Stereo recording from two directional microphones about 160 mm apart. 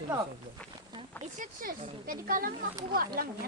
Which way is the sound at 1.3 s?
60° right (ahead or behind).